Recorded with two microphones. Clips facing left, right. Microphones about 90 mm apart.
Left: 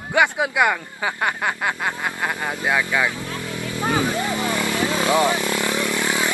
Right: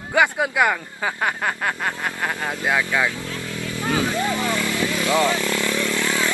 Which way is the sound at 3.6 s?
20° left (ahead or behind).